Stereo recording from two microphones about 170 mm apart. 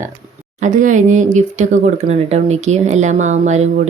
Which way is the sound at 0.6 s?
50° right (ahead or behind).